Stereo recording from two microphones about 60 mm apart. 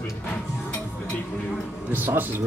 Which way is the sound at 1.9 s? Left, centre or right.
Right.